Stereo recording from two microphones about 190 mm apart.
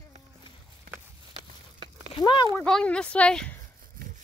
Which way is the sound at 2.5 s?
5° left (ahead or behind).